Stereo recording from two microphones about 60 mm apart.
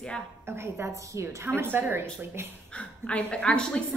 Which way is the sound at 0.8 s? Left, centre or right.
Right.